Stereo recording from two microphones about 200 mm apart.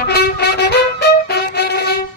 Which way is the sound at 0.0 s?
55° left (ahead or behind).